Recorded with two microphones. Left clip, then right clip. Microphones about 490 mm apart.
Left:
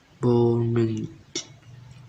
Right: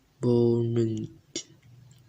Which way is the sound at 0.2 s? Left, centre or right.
Left.